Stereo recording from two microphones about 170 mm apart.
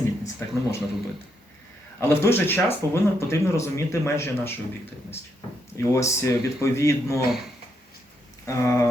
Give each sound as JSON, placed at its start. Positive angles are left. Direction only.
{"t": 0.0, "sound": "a sound", "side_deg": 15}
{"t": 2.0, "sound": "speech", "side_deg": 15}
{"t": 5.7, "sound": "speech", "side_deg": 15}
{"t": 8.4, "sound": "speech", "side_deg": 15}